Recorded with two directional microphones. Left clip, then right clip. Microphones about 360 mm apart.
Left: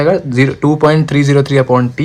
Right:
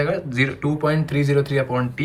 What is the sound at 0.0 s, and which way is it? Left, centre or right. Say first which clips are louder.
Speech: left 10 dB; centre.